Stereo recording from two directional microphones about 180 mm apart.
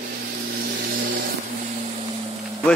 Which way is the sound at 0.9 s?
50° right (ahead or behind).